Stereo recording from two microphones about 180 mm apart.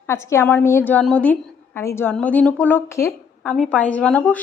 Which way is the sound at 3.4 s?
Centre (ahead or behind).